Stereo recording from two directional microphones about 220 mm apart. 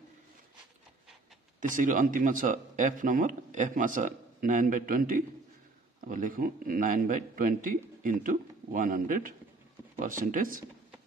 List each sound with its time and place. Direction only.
1.6 s a man's voice: 35° right (ahead or behind)